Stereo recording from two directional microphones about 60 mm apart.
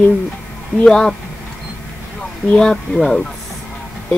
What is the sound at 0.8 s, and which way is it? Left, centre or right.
Speech, centre.